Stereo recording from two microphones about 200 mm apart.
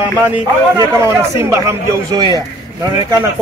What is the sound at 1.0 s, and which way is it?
A man's voice, 15° right (ahead or behind).